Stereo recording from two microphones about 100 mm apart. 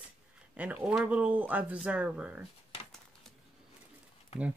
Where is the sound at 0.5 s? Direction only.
15° right (ahead or behind).